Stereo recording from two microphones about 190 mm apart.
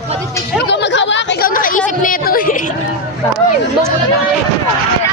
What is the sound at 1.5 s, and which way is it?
A woman's voice, 45° left (ahead or behind).